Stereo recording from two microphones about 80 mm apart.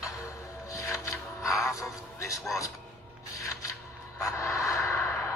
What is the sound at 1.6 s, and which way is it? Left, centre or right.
Music, left.